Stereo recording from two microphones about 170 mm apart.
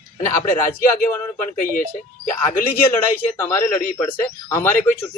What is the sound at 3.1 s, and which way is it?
Speech, 15° left (ahead or behind).